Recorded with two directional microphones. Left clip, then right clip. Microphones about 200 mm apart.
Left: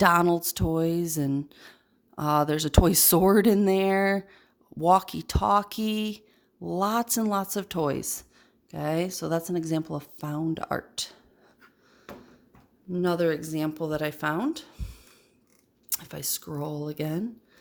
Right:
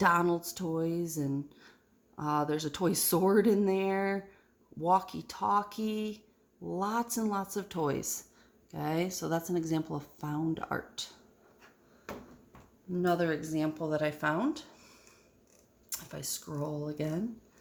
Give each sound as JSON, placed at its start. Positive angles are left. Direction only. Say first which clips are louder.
{"t": 0.0, "sound": "speech", "louder": "left 6 dB", "side_deg": 45}
{"t": 12.9, "sound": "speech", "louder": "left 5 dB", "side_deg": 50}